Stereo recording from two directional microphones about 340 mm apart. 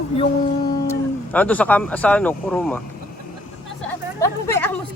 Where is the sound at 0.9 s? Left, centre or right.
Centre.